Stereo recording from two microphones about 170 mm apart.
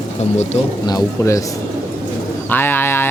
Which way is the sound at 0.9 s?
20° left (ahead or behind).